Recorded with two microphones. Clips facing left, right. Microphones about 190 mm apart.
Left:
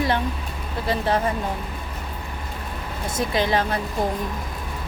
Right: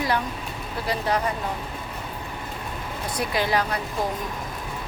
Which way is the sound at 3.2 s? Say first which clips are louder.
Left 2 dB; 20° left (ahead or behind).